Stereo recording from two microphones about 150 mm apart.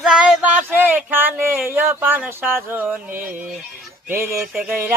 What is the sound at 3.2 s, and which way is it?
Speech, 60° right (ahead or behind).